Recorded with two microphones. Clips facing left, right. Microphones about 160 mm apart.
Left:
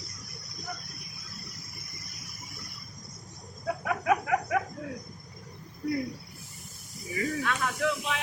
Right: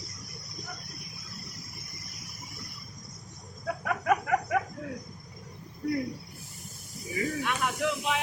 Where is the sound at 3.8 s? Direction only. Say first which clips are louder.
Even; 5° left (ahead or behind).